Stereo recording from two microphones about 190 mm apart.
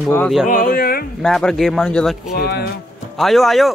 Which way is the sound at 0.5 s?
45° left (ahead or behind).